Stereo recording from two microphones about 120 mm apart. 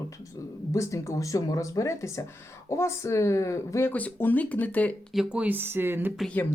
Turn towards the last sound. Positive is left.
turn(degrees=15)  # may be behind; listen again after turning